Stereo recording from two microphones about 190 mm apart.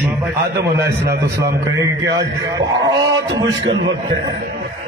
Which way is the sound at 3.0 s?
20° right (ahead or behind).